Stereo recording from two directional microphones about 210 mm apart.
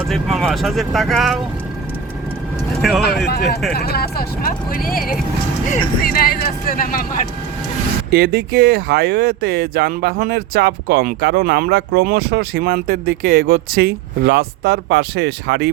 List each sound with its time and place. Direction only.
0.1 s speech: centre (ahead or behind)
2.8 s speech: centre (ahead or behind)
3.2 s speech: 50° left (ahead or behind)
8.1 s speech: 45° right (ahead or behind)